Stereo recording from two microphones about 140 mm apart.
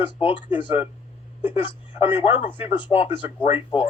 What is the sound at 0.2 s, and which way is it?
Speech, 40° left (ahead or behind).